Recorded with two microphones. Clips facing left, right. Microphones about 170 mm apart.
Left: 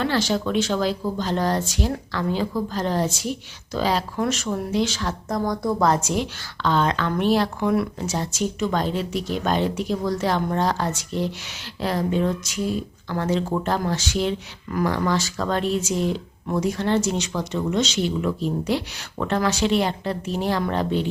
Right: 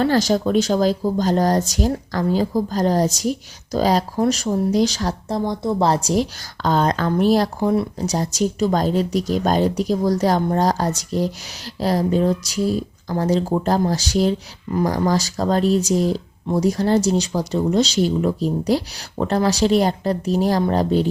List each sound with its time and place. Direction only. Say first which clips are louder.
0.0 s a woman's voice: right 5 dB; 40° right (ahead or behind)
5.5 s a woman's voice: right 1 dB; 25° right (ahead or behind)